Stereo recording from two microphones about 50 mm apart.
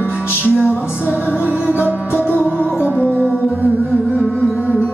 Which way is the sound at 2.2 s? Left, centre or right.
Left.